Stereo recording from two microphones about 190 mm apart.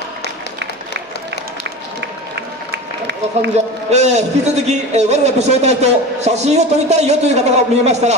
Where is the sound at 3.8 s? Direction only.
35° right (ahead or behind).